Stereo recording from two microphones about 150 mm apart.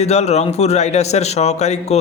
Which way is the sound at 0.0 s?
45° left (ahead or behind).